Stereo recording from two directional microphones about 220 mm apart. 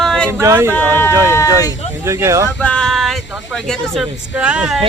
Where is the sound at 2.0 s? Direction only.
15° right (ahead or behind).